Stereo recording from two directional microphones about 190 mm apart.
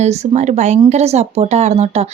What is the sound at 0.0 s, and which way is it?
Speech, 35° right (ahead or behind).